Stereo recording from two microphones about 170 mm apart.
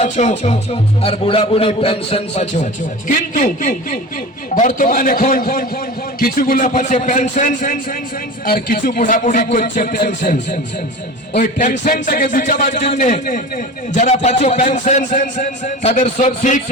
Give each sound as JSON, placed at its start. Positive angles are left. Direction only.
{"t": 0.0, "sound": "a man's voice", "side_deg": 40}
{"t": 3.1, "sound": "a man's voice", "side_deg": 50}